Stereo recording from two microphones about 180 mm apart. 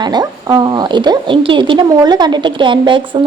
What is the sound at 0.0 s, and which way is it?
A woman's voice, 20° right (ahead or behind).